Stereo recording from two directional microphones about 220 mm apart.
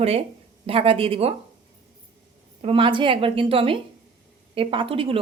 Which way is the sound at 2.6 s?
25° right (ahead or behind).